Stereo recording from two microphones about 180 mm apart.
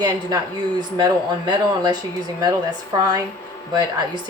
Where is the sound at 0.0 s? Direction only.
20° right (ahead or behind).